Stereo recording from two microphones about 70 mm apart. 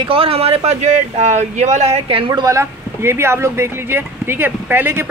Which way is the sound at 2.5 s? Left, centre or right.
Right.